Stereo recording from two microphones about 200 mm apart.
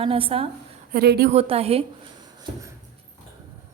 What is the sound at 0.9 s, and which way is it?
Speech, 50° right (ahead or behind).